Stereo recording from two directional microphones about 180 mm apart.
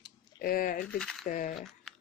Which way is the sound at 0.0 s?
55° left (ahead or behind).